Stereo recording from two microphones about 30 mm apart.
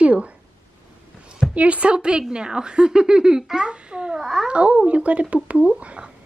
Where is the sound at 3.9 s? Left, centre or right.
Right.